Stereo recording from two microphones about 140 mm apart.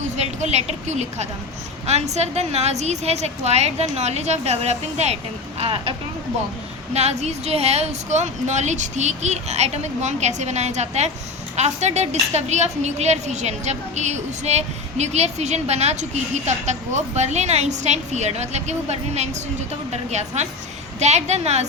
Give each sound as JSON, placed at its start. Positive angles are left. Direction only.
{"t": 0.0, "sound": "a woman's voice", "side_deg": -55}
{"t": 5.5, "sound": "speech", "side_deg": -40}
{"t": 6.9, "sound": "a woman's voice", "side_deg": -50}